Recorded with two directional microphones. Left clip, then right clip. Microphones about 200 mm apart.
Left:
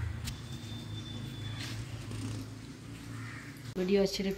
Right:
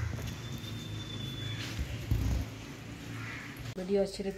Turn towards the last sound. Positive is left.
turn(degrees=-5)  # may be behind; listen again after turning